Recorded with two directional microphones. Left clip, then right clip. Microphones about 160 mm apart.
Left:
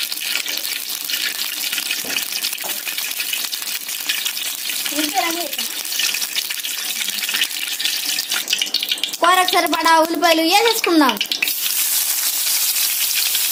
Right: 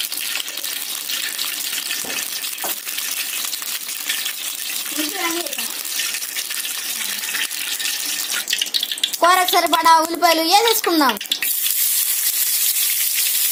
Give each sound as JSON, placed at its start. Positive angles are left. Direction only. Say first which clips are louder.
{"t": 9.2, "sound": "speech", "louder": "even", "side_deg": -25}